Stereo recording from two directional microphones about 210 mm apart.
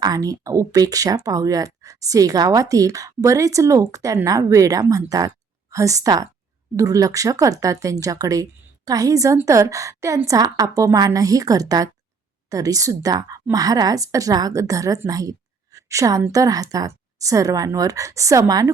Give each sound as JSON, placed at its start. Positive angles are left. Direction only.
{"t": 0.0, "sound": "a woman's voice", "side_deg": -15}